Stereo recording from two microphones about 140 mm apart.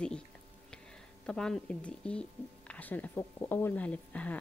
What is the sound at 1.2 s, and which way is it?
A woman's voice, 5° left (ahead or behind).